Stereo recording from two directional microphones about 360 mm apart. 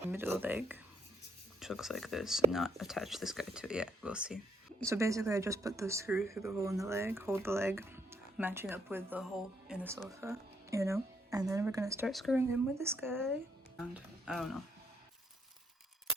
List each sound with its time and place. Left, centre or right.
0.0 s speech: centre